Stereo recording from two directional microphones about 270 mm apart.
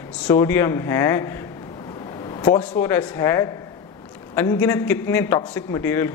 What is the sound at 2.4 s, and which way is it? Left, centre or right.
Speech, left.